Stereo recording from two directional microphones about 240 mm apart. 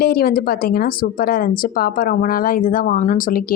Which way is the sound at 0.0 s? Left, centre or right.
Left.